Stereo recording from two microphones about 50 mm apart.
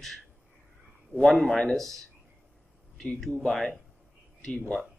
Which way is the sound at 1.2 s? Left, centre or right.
Centre.